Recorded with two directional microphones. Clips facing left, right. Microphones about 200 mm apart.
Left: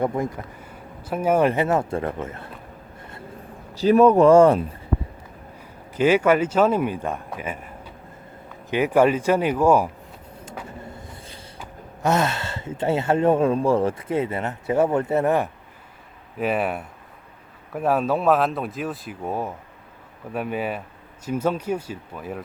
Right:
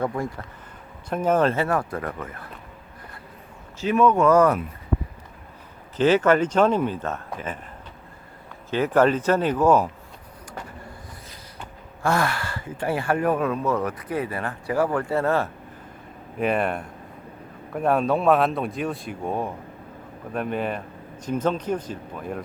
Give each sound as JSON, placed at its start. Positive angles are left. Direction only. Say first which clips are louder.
{"t": 0.0, "sound": "speech", "louder": "left 3 dB", "side_deg": 20}
{"t": 3.8, "sound": "speech", "louder": "left 5 dB", "side_deg": 35}
{"t": 6.0, "sound": "speech", "louder": "even", "side_deg": 10}
{"t": 8.7, "sound": "speech", "louder": "left 1 dB", "side_deg": 10}
{"t": 12.0, "sound": "speech", "louder": "left 2 dB", "side_deg": 20}
{"t": 16.4, "sound": "speech", "louder": "even", "side_deg": 5}